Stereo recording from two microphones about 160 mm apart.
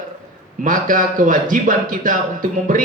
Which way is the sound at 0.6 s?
55° right (ahead or behind).